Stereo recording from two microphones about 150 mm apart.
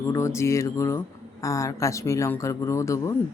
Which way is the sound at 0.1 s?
20° left (ahead or behind).